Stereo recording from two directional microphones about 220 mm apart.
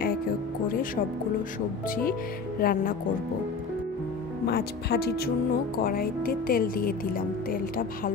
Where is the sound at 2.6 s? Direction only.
40° left (ahead or behind).